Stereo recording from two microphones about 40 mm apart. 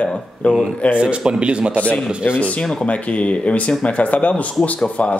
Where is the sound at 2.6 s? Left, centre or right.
Left.